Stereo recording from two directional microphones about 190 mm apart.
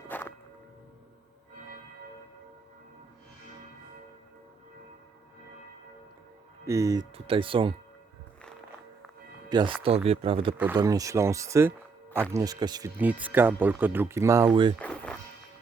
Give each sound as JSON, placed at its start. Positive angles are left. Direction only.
{"t": 0.1, "sound": "whip", "side_deg": 10}
{"t": 6.7, "sound": "speech", "side_deg": -15}
{"t": 9.5, "sound": "speech", "side_deg": -25}
{"t": 10.8, "sound": "speech", "side_deg": -20}
{"t": 13.0, "sound": "speech", "side_deg": -10}
{"t": 14.8, "sound": "music", "side_deg": 5}